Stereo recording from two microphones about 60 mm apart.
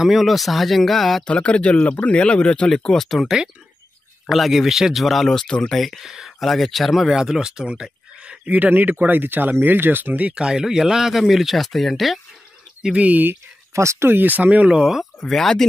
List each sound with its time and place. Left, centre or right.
0.0 s speech: centre
1.2 s speech: centre
5.8 s speech: centre; by 10.3 s right
10.3 s speech: centre
12.8 s speech: right
13.7 s speech: right
14.0 s speech: right
14.7 s speech: centre
15.1 s speech: centre